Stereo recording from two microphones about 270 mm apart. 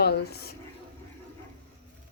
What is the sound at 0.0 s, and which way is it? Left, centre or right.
Speech, left.